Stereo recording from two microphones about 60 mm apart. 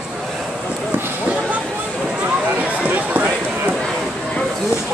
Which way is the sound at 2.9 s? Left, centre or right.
Right.